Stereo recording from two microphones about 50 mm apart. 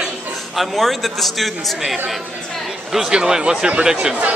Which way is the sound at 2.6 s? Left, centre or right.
Centre.